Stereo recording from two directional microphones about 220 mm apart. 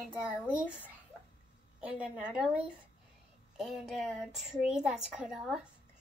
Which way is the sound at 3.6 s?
Centre (ahead or behind).